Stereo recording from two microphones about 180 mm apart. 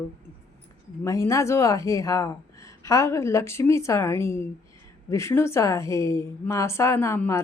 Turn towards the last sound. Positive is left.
turn(degrees=15)  # may be behind; listen again after turning